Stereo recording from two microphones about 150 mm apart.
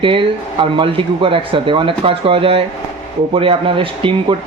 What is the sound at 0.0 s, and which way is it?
Speech, 35° right (ahead or behind).